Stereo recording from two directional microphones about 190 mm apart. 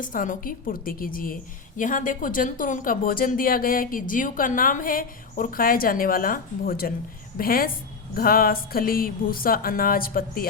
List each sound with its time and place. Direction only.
0.0 s speech: 45° left (ahead or behind)